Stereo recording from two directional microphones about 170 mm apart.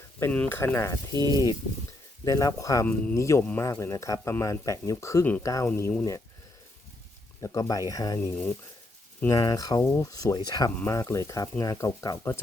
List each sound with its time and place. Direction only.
0.2 s speech: 10° left (ahead or behind)
1.1 s speech: 20° right (ahead or behind)
2.2 s speech: 20° left (ahead or behind)
2.8 s speech: 10° left (ahead or behind)
7.4 s speech: 20° left (ahead or behind)